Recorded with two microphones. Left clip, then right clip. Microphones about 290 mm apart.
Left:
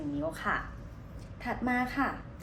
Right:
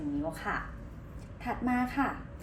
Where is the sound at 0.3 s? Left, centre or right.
Centre.